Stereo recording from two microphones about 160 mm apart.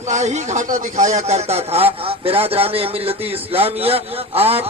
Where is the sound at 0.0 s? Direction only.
45° right (ahead or behind).